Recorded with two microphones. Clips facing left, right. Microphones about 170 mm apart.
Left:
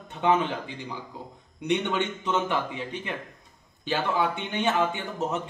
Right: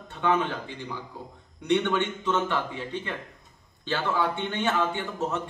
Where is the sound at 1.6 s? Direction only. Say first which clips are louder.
Right 2 dB; 15° left (ahead or behind).